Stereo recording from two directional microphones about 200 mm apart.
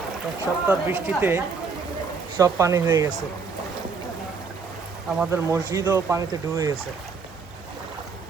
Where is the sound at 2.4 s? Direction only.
15° right (ahead or behind).